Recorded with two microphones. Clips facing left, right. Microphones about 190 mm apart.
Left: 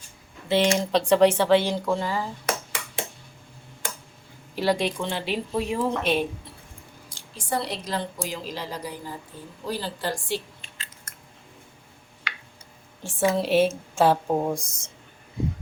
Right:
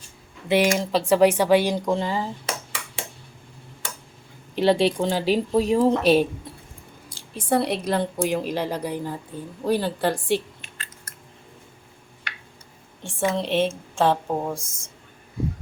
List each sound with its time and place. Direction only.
0.4 s speech: 15° right (ahead or behind)
0.8 s speech: 5° right (ahead or behind); by 2.2 s 20° right (ahead or behind)
4.5 s speech: 25° right (ahead or behind)
7.3 s a woman's voice: 60° right (ahead or behind)
13.0 s a woman's voice: 5° left (ahead or behind)